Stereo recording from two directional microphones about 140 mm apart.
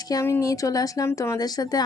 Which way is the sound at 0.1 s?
20° left (ahead or behind).